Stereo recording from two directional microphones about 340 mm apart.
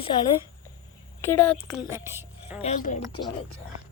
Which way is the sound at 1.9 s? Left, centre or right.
Centre.